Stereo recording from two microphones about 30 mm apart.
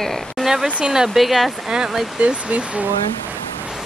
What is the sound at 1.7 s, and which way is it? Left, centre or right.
Speech, centre.